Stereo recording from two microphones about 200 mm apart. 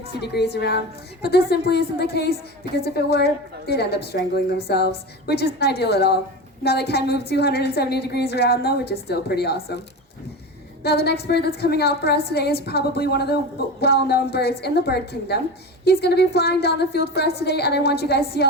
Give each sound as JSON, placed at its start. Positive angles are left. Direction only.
{"t": 0.2, "sound": "a woman's voice", "side_deg": 55}
{"t": 10.8, "sound": "a woman's voice", "side_deg": 55}